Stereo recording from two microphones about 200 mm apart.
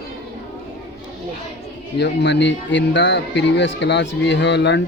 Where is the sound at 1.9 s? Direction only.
60° left (ahead or behind).